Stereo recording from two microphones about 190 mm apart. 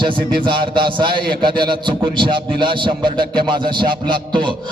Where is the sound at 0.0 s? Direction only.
25° right (ahead or behind).